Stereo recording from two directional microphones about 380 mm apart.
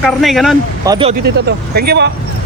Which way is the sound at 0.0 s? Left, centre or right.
Centre.